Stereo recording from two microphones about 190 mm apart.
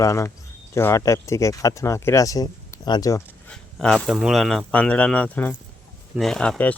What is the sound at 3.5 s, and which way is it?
Speech, 5° left (ahead or behind).